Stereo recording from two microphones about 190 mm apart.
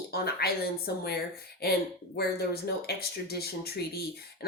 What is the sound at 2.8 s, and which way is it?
Speech, 55° left (ahead or behind).